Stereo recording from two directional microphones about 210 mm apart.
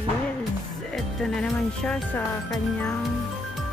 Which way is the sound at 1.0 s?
Centre (ahead or behind).